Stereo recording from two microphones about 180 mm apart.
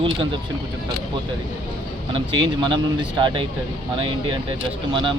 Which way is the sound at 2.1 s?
25° right (ahead or behind).